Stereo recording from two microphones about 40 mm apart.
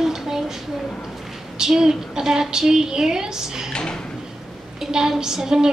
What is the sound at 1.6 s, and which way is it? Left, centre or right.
A woman's voice, centre.